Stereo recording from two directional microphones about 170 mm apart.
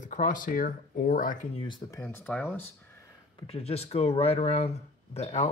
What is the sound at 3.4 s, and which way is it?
Speech, 35° left (ahead or behind).